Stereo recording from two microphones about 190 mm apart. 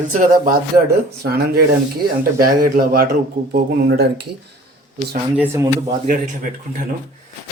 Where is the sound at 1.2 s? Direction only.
55° right (ahead or behind).